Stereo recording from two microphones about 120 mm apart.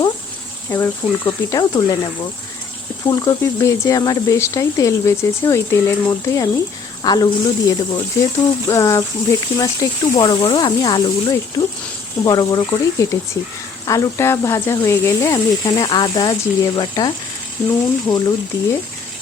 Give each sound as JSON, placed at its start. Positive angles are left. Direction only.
{"t": 0.8, "sound": "speech", "side_deg": 30}
{"t": 3.1, "sound": "speech", "side_deg": 35}